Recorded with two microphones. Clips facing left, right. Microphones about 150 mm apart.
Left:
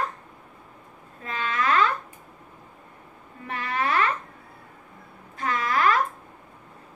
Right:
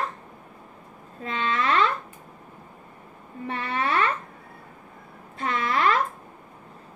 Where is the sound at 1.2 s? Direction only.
30° right (ahead or behind).